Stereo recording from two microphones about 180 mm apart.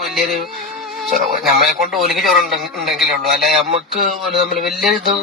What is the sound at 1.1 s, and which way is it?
Speech, 45° right (ahead or behind).